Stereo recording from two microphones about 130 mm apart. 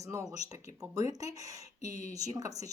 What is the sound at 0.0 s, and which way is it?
A woman's voice, 25° right (ahead or behind).